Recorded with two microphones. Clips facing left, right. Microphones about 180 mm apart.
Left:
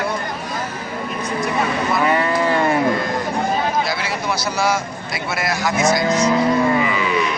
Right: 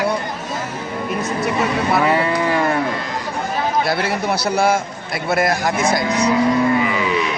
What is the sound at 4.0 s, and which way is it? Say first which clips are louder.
A man's voice: right 3 dB; 55° right (ahead or behind).